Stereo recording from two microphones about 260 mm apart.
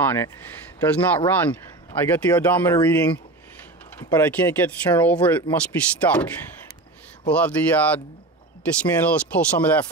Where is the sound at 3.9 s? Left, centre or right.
Centre.